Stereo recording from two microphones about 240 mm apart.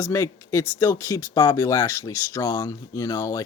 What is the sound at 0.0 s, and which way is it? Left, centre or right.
Speech, centre.